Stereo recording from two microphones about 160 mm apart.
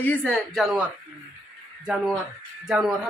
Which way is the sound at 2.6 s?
5° right (ahead or behind).